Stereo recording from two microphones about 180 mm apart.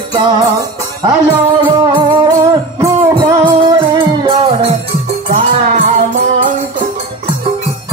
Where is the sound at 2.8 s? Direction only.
20° right (ahead or behind).